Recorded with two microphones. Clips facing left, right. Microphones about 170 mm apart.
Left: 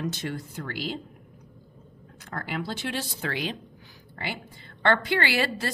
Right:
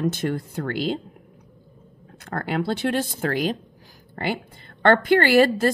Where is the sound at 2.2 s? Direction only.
60° right (ahead or behind).